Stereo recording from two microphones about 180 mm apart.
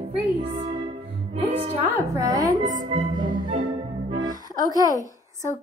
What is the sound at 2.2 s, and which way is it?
Music, 20° right (ahead or behind).